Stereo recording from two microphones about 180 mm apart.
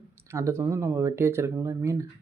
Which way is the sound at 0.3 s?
15° right (ahead or behind).